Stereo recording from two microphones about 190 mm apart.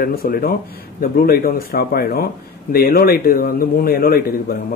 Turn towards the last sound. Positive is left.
turn(degrees=50)  # may be behind; listen again after turning